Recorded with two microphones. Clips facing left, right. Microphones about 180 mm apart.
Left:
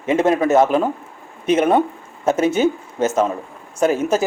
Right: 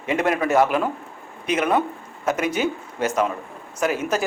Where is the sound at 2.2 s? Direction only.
25° left (ahead or behind).